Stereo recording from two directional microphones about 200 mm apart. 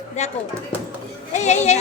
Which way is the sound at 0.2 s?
35° left (ahead or behind).